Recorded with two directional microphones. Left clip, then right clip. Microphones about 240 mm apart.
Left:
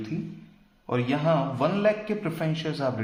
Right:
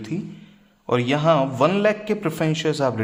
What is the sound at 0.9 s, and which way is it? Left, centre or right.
A man's voice, right.